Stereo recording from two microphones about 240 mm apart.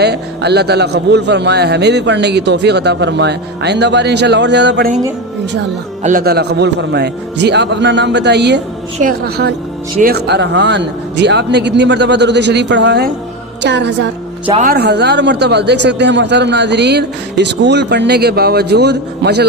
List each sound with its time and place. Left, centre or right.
0.0 s a man's voice: right
6.0 s a man's voice: right
14.4 s speech: right
14.7 s a man's voice: right